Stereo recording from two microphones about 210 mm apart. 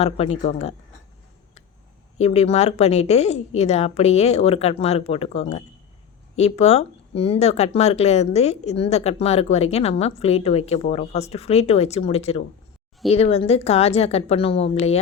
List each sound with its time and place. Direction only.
0.0 s speech: 30° left (ahead or behind)
2.1 s speech: 30° left (ahead or behind)